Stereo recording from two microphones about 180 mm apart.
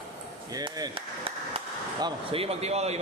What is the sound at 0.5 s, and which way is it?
A man's voice, 20° right (ahead or behind).